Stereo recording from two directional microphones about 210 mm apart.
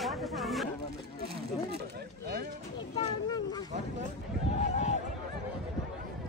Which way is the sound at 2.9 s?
30° left (ahead or behind).